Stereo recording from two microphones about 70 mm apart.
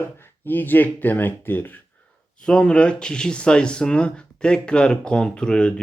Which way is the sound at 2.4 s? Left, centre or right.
Centre.